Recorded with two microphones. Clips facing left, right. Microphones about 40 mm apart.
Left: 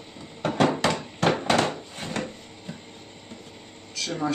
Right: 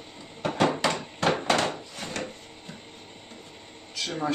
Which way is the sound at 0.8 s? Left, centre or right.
Centre.